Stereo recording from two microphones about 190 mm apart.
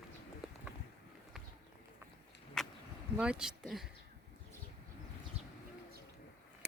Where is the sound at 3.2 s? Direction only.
5° right (ahead or behind).